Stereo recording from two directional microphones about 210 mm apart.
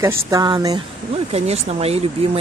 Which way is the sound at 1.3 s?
30° right (ahead or behind).